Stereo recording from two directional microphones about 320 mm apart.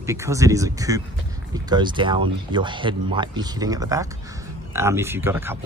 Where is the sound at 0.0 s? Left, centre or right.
Centre.